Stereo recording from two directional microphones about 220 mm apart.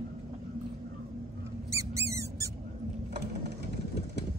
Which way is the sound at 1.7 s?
15° right (ahead or behind).